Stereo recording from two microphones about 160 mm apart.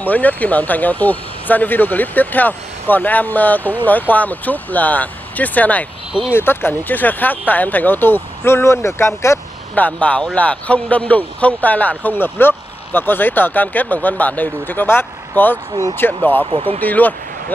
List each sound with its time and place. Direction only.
0.0 s speech: 10° left (ahead or behind)
16.4 s speech: 35° right (ahead or behind)
16.8 s speech: 10° left (ahead or behind)